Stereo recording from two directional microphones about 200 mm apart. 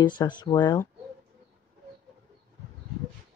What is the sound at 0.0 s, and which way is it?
Speech, 20° left (ahead or behind).